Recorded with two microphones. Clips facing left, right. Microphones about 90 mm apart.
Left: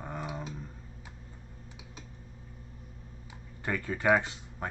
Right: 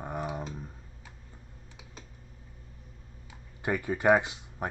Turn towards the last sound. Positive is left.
turn(degrees=-15)  # may be behind; listen again after turning